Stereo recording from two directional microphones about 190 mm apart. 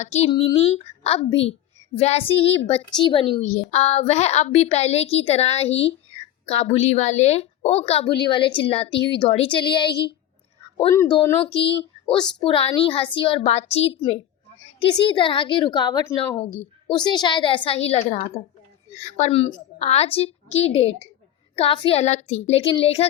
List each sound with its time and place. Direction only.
0.0 s a woman's voice: 35° left (ahead or behind); by 16.4 s 20° left (ahead or behind)
16.4 s a woman's voice: 30° left (ahead or behind)